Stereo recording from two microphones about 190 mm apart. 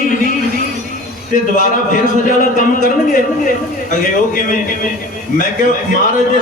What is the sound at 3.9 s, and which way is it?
Speech, 45° left (ahead or behind).